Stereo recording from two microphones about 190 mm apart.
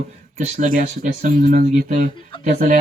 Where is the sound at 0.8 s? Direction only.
40° right (ahead or behind).